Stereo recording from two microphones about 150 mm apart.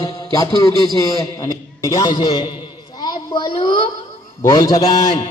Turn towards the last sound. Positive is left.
turn(degrees=25)  # may be behind; listen again after turning